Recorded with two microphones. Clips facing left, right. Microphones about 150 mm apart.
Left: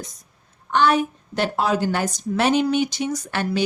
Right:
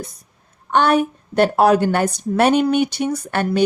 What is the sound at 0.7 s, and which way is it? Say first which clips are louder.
A woman's voice: right 3 dB; 60° right (ahead or behind).